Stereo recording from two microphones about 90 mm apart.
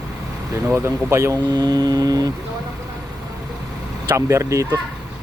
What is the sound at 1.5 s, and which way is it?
Mantra, 50° right (ahead or behind).